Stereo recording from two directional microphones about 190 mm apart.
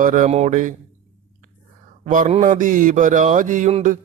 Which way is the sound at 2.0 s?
40° right (ahead or behind).